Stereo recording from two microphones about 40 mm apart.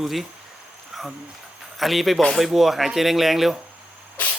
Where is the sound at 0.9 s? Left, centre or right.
Centre.